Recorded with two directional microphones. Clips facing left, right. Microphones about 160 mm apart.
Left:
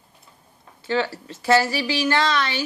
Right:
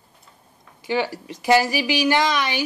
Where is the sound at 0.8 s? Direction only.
15° right (ahead or behind).